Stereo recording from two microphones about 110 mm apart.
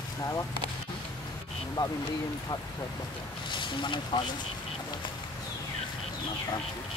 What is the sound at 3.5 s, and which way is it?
Speech, 45° left (ahead or behind).